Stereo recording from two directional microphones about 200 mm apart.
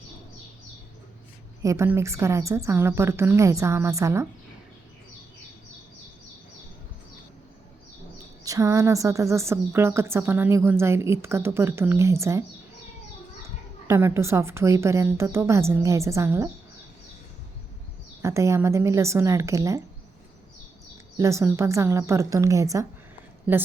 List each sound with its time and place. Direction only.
1.6 s a woman's voice: 15° right (ahead or behind)
8.4 s a woman's voice: 15° right (ahead or behind)
13.8 s a woman's voice: 15° right (ahead or behind)
18.2 s a woman's voice: 15° right (ahead or behind)
21.2 s a woman's voice: 15° right (ahead or behind)